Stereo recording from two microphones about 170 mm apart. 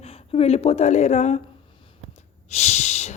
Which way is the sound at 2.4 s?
40° left (ahead or behind).